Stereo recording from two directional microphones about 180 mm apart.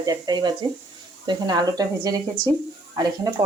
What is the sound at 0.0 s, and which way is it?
Speech, 20° right (ahead or behind).